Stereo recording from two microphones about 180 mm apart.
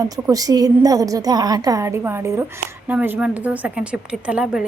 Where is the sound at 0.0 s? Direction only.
20° right (ahead or behind).